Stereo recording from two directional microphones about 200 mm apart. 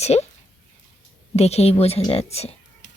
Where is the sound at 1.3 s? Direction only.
30° left (ahead or behind).